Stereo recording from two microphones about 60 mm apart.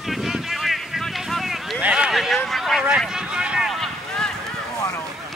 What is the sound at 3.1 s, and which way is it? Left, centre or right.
Vehicle, centre.